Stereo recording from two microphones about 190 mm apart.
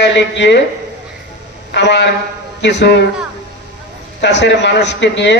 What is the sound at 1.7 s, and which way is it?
A man's voice, 65° left (ahead or behind).